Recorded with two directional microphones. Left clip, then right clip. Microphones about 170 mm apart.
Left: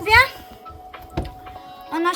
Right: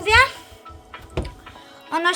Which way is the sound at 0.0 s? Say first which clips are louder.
Left 1 dB; 10° right (ahead or behind).